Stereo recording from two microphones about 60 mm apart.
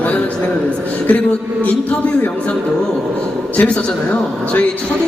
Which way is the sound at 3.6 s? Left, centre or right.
Centre.